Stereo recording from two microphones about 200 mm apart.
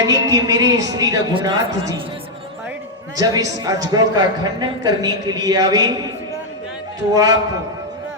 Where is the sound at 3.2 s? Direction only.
20° right (ahead or behind).